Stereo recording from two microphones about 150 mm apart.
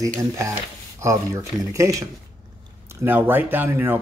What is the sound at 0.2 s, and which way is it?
Speech, 20° right (ahead or behind).